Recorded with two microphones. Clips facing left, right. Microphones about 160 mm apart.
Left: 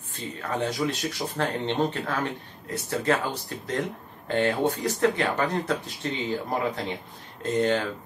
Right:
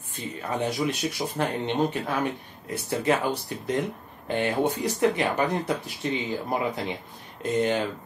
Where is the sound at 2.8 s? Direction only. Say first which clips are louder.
Right 1 dB; 15° right (ahead or behind).